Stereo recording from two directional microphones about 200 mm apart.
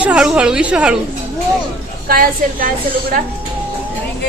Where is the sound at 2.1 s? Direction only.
45° right (ahead or behind).